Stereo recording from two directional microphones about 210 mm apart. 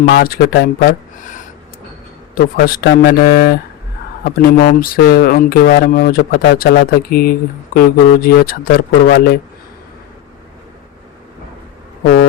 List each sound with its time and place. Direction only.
0.0 s speech: 45° left (ahead or behind)